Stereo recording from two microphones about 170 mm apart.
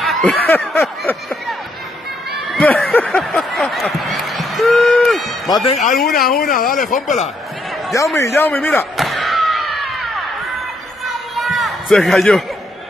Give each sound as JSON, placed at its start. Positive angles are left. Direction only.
{"t": 0.0, "sound": "snicker", "side_deg": 0}
{"t": 2.5, "sound": "speech", "side_deg": 5}
{"t": 5.8, "sound": "speech", "side_deg": 55}
{"t": 7.9, "sound": "a man's voice", "side_deg": 15}
{"t": 8.9, "sound": "a sound", "side_deg": 0}